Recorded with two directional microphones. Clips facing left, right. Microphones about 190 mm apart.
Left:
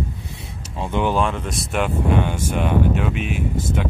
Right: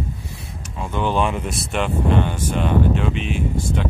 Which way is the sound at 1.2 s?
5° right (ahead or behind).